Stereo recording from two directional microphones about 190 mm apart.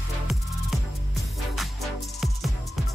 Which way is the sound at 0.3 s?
Centre (ahead or behind).